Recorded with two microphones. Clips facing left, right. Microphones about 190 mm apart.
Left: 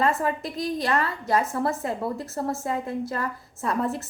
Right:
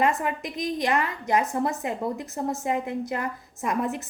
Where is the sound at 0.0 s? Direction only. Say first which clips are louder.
Left 1 dB; 15° right (ahead or behind).